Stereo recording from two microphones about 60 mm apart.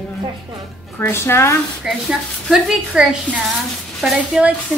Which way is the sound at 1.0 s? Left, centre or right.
Left.